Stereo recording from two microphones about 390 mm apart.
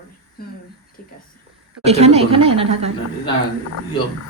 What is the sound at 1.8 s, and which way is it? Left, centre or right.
A woman's voice, centre.